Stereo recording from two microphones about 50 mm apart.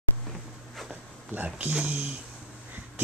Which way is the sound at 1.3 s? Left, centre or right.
Right.